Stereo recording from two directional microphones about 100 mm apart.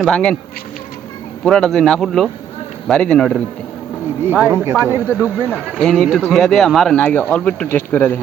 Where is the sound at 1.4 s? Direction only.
5° left (ahead or behind).